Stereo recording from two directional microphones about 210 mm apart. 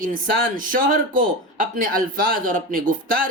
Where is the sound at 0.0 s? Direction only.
40° right (ahead or behind).